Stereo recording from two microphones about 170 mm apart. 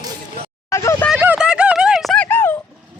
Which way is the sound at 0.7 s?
15° left (ahead or behind).